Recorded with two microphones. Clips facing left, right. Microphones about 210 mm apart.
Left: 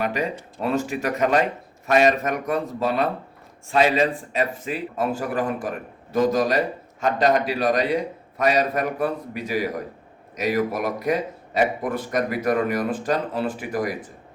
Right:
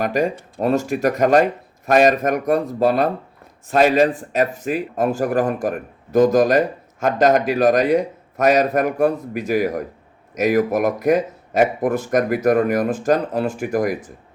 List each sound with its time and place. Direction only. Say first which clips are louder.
0.0 s a man's voice: right 5 dB; 45° right (ahead or behind)